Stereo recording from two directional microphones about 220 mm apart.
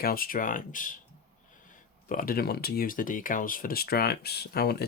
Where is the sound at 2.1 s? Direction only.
40° left (ahead or behind).